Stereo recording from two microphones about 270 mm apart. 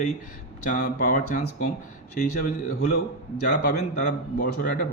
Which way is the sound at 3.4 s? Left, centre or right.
Left.